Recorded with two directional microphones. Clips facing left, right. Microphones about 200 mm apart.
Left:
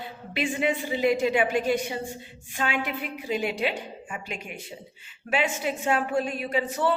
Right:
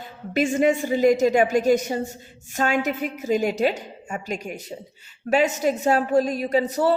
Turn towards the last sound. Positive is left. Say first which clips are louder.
# right 5 dB
turn(degrees=-40)  # may be behind; listen again after turning